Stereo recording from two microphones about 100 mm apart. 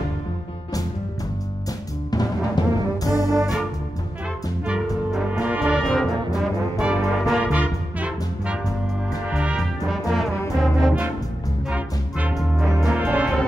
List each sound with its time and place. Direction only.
2.0 s music: 40° left (ahead or behind)
5.4 s brass instrument: 10° right (ahead or behind)
5.9 s brass instrument: centre (ahead or behind)
7.4 s music: 15° right (ahead or behind)
9.6 s brass instrument: centre (ahead or behind)
11.7 s music: 15° right (ahead or behind)
12.4 s music: centre (ahead or behind)
13.0 s music: 10° right (ahead or behind)